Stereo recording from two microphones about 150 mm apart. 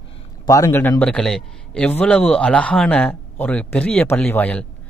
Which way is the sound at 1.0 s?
5° left (ahead or behind).